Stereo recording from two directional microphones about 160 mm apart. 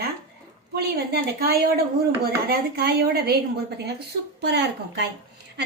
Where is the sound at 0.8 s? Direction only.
85° right.